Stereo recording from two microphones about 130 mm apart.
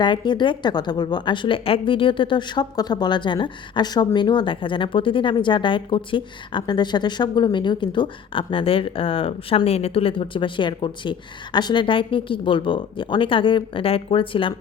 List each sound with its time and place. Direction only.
0.0 s a woman's voice: 35° left (ahead or behind)